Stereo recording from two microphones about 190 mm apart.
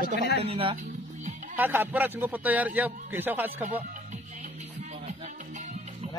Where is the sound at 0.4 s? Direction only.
30° right (ahead or behind).